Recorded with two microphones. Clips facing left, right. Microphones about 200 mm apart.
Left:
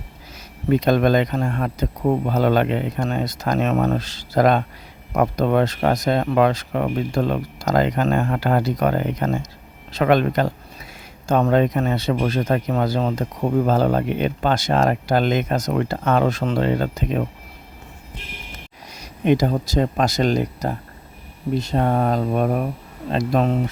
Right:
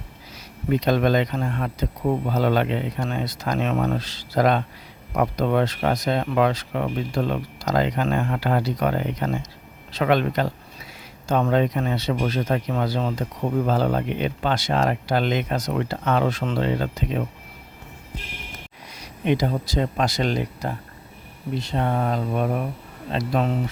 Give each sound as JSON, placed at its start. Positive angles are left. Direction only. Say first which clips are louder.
{"t": 0.7, "sound": "speech", "louder": "left 3 dB", "side_deg": 50}
{"t": 18.9, "sound": "speech", "louder": "left 4 dB", "side_deg": 45}